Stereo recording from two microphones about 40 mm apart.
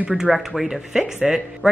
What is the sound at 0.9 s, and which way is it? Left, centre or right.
Speech, centre.